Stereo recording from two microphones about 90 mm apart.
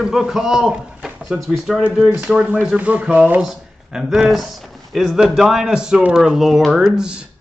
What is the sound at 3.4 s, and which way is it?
Speech, 5° right (ahead or behind).